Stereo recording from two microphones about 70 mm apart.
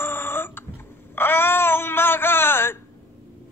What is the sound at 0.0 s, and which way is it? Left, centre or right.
Burping, left.